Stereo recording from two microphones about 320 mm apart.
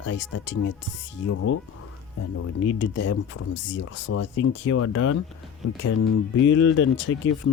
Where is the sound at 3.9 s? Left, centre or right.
Left.